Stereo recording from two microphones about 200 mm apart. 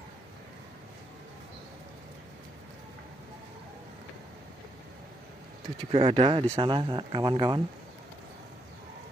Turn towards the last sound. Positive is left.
turn(degrees=-20)  # may be behind; listen again after turning